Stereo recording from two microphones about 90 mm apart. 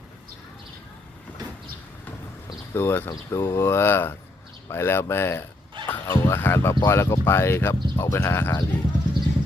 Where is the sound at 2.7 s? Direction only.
25° left (ahead or behind).